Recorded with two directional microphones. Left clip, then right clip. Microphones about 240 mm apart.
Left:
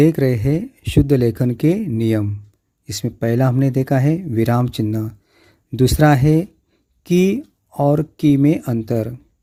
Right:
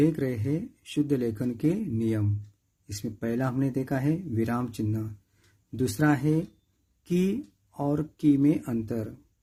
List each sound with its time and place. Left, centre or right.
0.0 s speech: left